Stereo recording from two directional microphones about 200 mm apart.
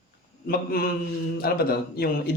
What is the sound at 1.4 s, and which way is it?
Speech, 50° left (ahead or behind).